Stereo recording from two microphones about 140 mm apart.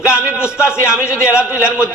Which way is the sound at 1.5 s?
20° left (ahead or behind).